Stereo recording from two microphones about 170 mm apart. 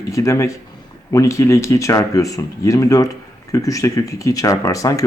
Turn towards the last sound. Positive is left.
turn(degrees=20)  # may be behind; listen again after turning